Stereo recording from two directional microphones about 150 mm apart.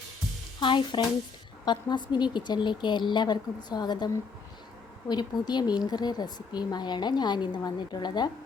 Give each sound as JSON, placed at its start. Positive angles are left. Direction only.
{"t": 0.6, "sound": "speech", "side_deg": 35}